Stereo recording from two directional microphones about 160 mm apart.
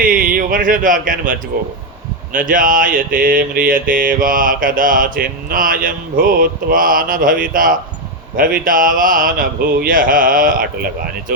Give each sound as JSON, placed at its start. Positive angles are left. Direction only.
{"t": 0.0, "sound": "speech", "side_deg": -60}
{"t": 2.3, "sound": "mantra", "side_deg": -55}